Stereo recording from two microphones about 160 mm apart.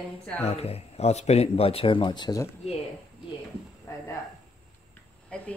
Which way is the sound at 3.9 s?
20° left (ahead or behind).